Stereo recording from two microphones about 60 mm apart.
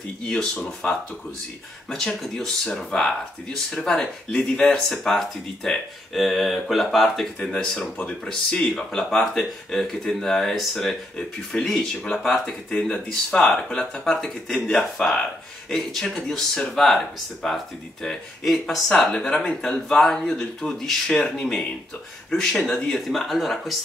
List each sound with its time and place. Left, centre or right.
0.3 s speech: centre